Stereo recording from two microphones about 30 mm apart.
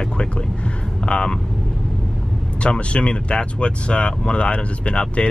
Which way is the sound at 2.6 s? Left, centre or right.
Left.